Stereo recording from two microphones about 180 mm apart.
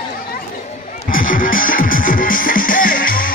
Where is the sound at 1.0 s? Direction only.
50° left (ahead or behind).